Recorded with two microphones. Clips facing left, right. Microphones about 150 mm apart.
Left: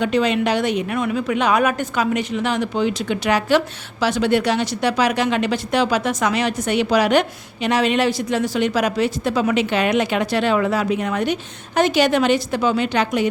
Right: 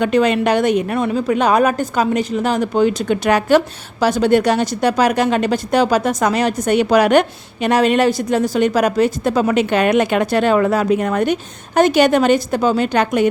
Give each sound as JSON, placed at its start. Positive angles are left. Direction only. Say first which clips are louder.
{"t": 0.0, "sound": "speech", "louder": "right 4 dB", "side_deg": -50}
{"t": 0.9, "sound": "speech", "louder": "right 4 dB", "side_deg": -35}